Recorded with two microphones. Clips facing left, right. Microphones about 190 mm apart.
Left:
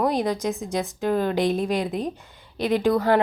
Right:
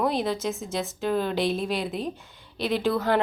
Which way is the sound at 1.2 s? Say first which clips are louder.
Left 4 dB; 50° left (ahead or behind).